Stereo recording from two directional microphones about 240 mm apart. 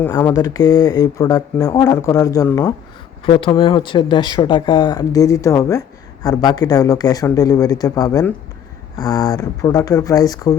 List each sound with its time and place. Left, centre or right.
0.0 s speech: centre